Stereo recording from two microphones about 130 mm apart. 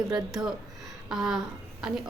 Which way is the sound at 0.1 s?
5° right (ahead or behind).